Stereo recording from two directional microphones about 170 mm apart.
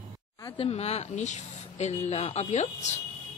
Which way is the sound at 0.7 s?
40° left (ahead or behind).